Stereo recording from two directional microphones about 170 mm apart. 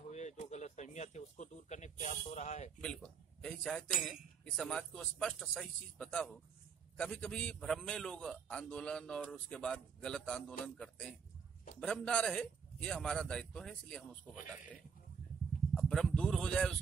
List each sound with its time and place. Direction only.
0.1 s a sound: 45° left (ahead or behind)
2.8 s a man's voice: 5° left (ahead or behind)
15.7 s speech: centre (ahead or behind)